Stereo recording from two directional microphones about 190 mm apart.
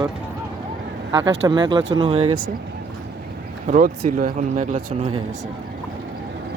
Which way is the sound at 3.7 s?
45° right (ahead or behind).